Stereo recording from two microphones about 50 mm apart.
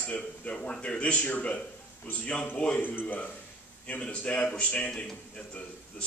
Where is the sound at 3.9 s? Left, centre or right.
Left.